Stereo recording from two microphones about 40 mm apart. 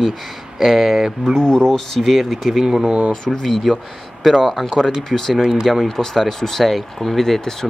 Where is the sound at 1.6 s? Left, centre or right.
Centre.